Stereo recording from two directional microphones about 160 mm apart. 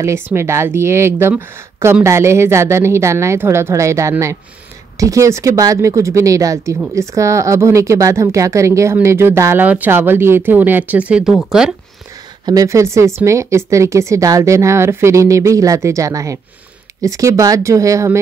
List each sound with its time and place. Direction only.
0.0 s a woman's voice: 15° right (ahead or behind)
12.4 s speech: 20° right (ahead or behind)